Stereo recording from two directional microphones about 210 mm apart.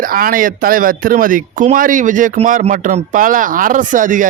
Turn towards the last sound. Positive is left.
turn(degrees=-40)  # may be behind; listen again after turning